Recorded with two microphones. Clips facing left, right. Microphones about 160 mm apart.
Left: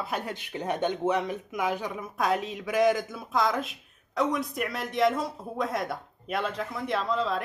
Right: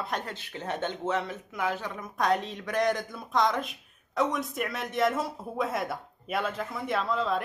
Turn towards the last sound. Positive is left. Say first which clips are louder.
# even
turn(degrees=0)  # may be behind; listen again after turning